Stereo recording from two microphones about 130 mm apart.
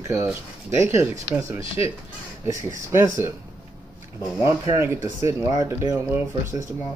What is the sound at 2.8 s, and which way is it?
Speech, 20° right (ahead or behind).